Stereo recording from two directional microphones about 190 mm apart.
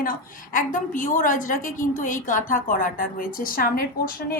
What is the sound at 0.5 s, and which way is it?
A woman's voice, 45° left (ahead or behind).